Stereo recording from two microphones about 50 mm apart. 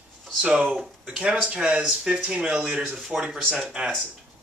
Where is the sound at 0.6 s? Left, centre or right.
Centre.